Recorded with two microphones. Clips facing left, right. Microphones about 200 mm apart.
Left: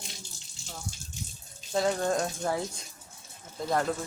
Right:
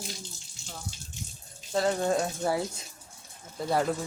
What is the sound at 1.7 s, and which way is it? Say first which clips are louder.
Speech: right 1 dB; centre (ahead or behind).